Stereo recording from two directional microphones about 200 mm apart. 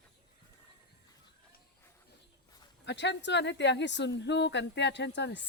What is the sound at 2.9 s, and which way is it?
Speech, 60° left (ahead or behind).